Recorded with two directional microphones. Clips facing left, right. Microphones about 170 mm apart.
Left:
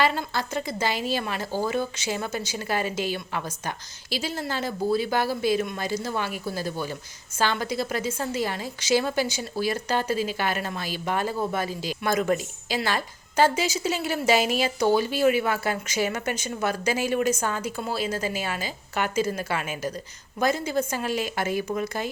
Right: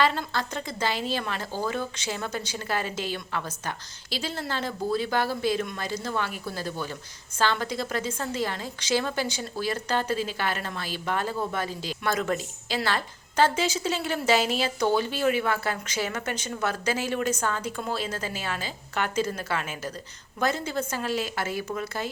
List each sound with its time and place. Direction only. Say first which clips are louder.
0.0 s a woman's voice: left 1 dB; 10° left (ahead or behind)